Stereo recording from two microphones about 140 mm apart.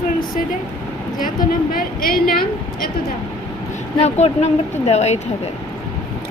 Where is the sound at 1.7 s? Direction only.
90° left.